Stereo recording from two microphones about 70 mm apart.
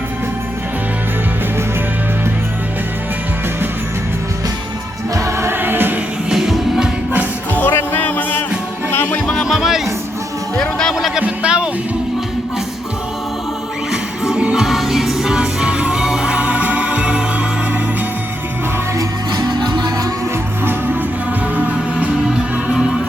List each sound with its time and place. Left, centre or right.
5.1 s music: right
6.3 s music: centre
7.5 s music: left
9.1 s music: centre
9.5 s music: centre
10.6 s music: centre
10.9 s music: centre
13.9 s music: centre
18.9 s music: right
21.5 s music: right